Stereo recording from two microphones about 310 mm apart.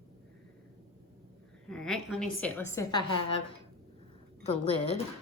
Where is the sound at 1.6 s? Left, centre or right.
Centre.